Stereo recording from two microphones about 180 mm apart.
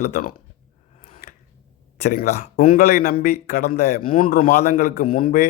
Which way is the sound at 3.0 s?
60° left (ahead or behind).